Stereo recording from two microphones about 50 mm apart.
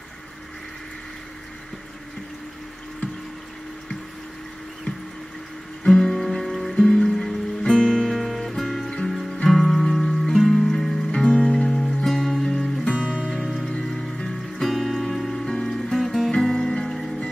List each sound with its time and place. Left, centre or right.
5.9 s music: centre
11.2 s music: centre
11.7 s music: centre
12.4 s music: centre
12.9 s music: right
13.7 s music: centre
14.6 s music: centre
16.3 s music: centre